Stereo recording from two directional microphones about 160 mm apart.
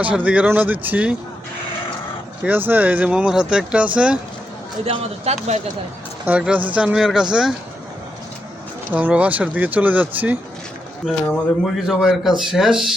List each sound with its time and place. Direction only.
0.0 s speech: 10° right (ahead or behind)
2.4 s speech: 10° right (ahead or behind)
4.9 s speech: 40° right (ahead or behind)
6.2 s speech: 10° right (ahead or behind)
8.9 s speech: 10° right (ahead or behind)
11.6 s speech: 5° right (ahead or behind)